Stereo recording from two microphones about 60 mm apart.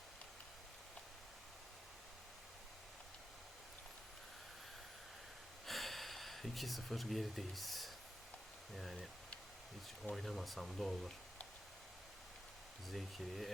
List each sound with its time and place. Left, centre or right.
5.6 s a sound: centre
8.7 s speech: centre
10.2 s speech: centre
12.9 s speech: centre